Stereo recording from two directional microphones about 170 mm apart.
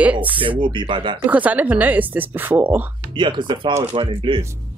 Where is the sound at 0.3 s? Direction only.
30° right (ahead or behind).